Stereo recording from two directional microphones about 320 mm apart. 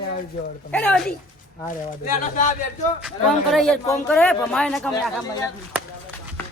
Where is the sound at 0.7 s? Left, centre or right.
Centre.